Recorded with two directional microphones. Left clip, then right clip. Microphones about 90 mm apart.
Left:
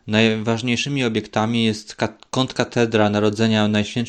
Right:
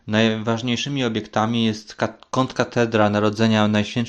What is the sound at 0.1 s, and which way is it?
Speech, 60° left (ahead or behind).